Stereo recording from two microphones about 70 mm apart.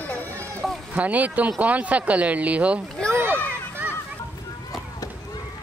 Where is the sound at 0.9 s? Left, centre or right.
Right.